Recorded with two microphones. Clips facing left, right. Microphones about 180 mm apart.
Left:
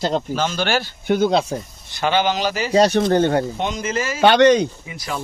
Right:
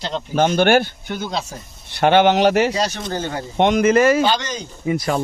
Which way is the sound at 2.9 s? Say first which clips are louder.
Left 10 dB; 55° left (ahead or behind).